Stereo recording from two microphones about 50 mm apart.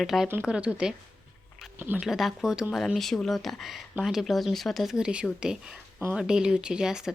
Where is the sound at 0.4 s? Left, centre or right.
Right.